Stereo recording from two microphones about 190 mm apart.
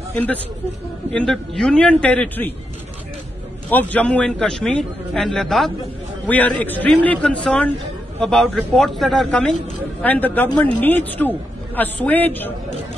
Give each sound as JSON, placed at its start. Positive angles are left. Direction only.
{"t": 0.1, "sound": "a man's voice", "side_deg": 10}
{"t": 3.7, "sound": "a man's voice", "side_deg": 10}